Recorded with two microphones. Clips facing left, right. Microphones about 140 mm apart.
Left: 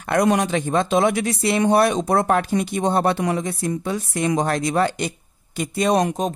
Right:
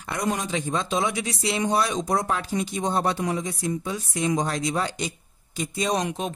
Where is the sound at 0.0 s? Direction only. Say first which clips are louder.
Left 9 dB; 65° left (ahead or behind).